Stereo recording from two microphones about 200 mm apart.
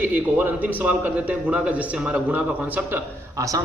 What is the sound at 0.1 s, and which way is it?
A man's voice, 10° right (ahead or behind).